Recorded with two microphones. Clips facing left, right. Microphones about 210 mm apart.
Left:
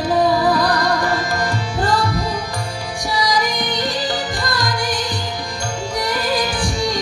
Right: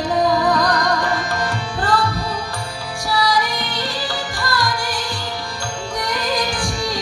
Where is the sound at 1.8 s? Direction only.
15° left (ahead or behind).